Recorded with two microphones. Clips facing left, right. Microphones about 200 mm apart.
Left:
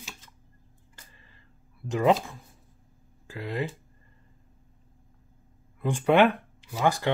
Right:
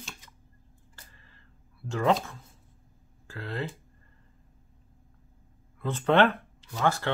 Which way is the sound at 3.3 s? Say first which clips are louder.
Left 3 dB; 15° left (ahead or behind).